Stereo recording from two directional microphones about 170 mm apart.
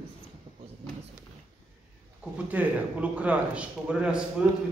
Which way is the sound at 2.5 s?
10° right (ahead or behind).